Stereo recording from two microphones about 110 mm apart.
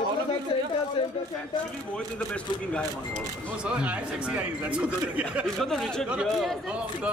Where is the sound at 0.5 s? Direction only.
50° left (ahead or behind).